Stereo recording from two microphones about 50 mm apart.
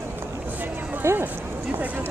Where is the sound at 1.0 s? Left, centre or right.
Right.